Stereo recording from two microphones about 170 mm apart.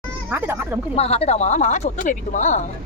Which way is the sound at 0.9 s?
35° left (ahead or behind).